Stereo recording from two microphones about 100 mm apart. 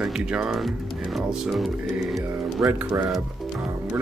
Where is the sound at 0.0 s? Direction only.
5° right (ahead or behind).